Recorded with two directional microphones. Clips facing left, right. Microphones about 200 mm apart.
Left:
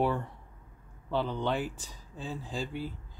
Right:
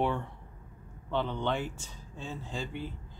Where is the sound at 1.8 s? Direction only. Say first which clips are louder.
Left 1 dB; 35° left (ahead or behind).